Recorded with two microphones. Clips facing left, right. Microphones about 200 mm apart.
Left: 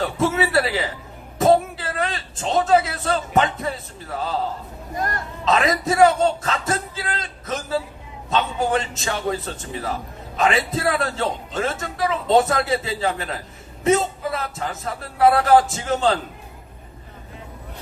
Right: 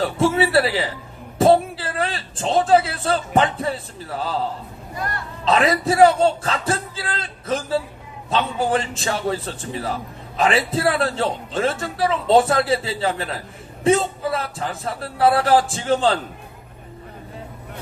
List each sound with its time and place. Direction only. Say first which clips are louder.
0.0 s a man's voice: right 2 dB; 30° right (ahead or behind)
4.9 s speech: left 2 dB; 45° left (ahead or behind)
5.5 s a man's voice: right 2 dB; 30° right (ahead or behind)